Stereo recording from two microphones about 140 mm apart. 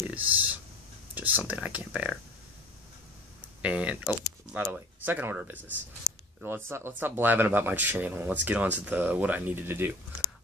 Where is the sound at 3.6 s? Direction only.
10° right (ahead or behind).